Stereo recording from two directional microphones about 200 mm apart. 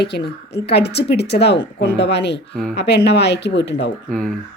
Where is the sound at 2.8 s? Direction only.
55° left (ahead or behind).